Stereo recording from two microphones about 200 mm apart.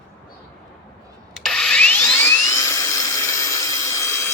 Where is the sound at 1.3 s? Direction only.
Centre (ahead or behind).